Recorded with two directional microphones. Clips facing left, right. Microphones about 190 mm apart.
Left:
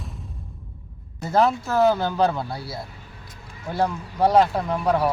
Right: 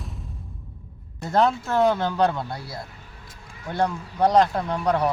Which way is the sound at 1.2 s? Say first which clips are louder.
Left 1 dB; 5° left (ahead or behind).